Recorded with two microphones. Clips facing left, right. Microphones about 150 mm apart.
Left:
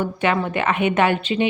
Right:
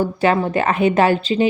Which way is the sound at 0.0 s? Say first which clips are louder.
Right 4 dB; 35° right (ahead or behind).